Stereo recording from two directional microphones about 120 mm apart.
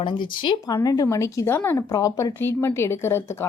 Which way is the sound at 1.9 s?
30° left (ahead or behind).